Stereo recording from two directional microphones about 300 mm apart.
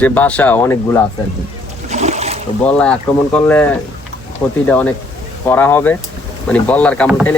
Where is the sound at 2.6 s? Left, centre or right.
Centre.